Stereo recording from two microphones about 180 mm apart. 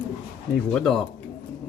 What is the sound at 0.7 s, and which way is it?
Speech, 5° left (ahead or behind).